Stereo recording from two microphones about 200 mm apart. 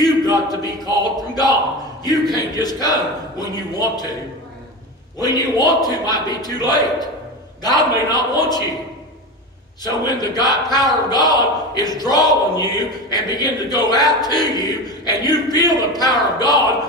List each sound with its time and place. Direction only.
0.0 s speech: 20° left (ahead or behind)
5.2 s speech: 20° left (ahead or behind)
10.0 s speech: 20° left (ahead or behind)